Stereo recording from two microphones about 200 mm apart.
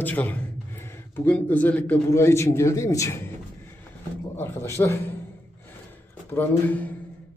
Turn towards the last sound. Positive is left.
turn(degrees=10)  # may be behind; listen again after turning